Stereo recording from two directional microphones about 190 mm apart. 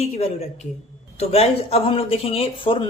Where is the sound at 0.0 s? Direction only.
30° left (ahead or behind).